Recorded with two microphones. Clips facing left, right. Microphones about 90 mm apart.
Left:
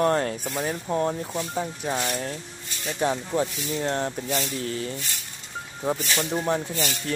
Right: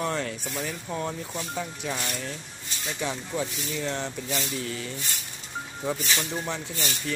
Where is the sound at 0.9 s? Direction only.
35° left (ahead or behind).